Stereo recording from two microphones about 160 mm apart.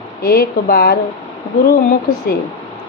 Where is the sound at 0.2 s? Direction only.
70° left (ahead or behind).